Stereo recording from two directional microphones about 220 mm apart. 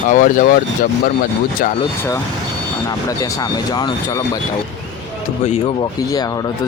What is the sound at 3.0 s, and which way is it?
Speech, 15° left (ahead or behind).